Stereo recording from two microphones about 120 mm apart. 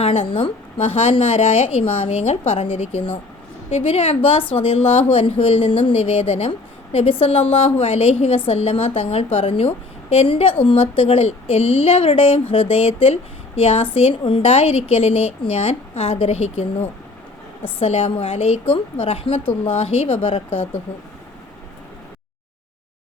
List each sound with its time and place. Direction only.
0.0 s a woman's voice: 50° left (ahead or behind)
17.7 s a woman's voice: 55° left (ahead or behind)